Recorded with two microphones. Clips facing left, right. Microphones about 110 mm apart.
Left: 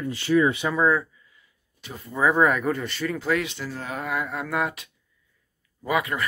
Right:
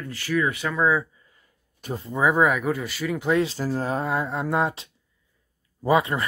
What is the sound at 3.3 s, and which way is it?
Speech, 30° right (ahead or behind).